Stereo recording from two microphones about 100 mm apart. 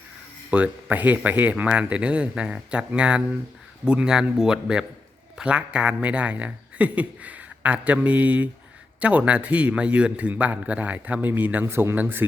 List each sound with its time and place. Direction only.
0.5 s speech: 15° right (ahead or behind)